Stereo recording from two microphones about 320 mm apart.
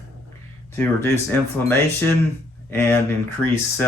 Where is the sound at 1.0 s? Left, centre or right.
Centre.